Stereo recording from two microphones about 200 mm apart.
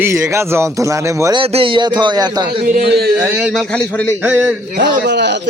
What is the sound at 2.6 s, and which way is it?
Speech, 50° right (ahead or behind).